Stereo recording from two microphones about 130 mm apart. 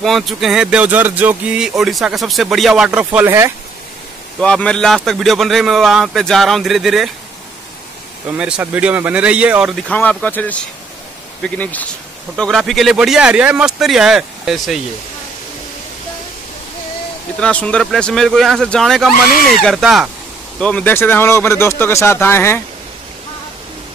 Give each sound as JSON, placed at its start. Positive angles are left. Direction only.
{"t": 0.0, "sound": "speech", "side_deg": 0}
{"t": 4.4, "sound": "speech", "side_deg": 5}
{"t": 8.4, "sound": "speech", "side_deg": -5}
{"t": 9.8, "sound": "speech", "side_deg": 10}
{"t": 17.4, "sound": "speech", "side_deg": 10}
{"t": 20.5, "sound": "speech", "side_deg": 10}